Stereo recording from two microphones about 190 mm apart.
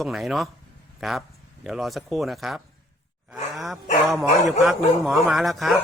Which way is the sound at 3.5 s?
Centre (ahead or behind).